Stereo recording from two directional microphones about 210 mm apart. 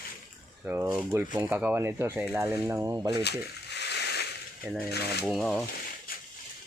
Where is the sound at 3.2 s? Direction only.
55° left (ahead or behind).